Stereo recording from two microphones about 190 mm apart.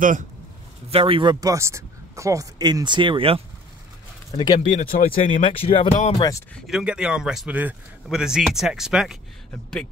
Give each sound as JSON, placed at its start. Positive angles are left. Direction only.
{"t": 0.8, "sound": "speech", "side_deg": -30}
{"t": 4.4, "sound": "speech", "side_deg": 25}
{"t": 4.7, "sound": "speech", "side_deg": 45}
{"t": 5.4, "sound": "speech", "side_deg": 30}
{"t": 6.5, "sound": "a man's voice", "side_deg": -5}